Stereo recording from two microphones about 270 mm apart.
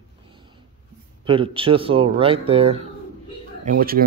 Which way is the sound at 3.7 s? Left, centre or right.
Right.